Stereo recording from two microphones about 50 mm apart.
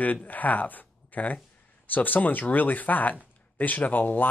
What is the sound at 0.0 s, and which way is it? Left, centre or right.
Speech, left.